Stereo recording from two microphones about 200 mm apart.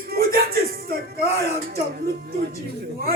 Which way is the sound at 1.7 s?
50° right (ahead or behind).